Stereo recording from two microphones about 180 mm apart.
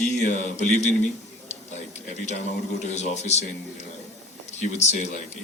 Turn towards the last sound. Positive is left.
turn(degrees=40)  # may be behind; listen again after turning